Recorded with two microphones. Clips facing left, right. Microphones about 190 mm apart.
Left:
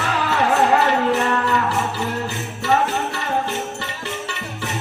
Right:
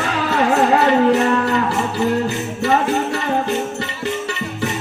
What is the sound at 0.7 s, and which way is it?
Music, 40° right (ahead or behind).